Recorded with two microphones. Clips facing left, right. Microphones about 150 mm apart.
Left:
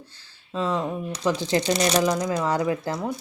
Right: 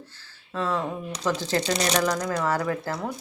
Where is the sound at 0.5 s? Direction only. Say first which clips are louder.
Left 2 dB; 15° left (ahead or behind).